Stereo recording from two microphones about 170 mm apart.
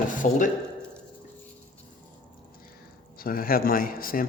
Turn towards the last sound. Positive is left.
turn(degrees=60)  # may be behind; listen again after turning